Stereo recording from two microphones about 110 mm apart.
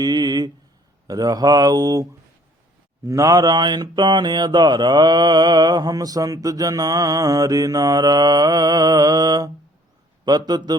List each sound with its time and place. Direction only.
0.0 s a sound: 40° right (ahead or behind)
1.0 s mantra: 35° right (ahead or behind)
3.1 s mantra: 30° right (ahead or behind)